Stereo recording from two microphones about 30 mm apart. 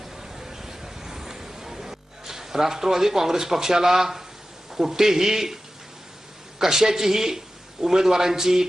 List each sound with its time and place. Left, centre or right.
0.0 s a sound: centre
4.7 s a man's voice: centre
6.6 s a man's voice: centre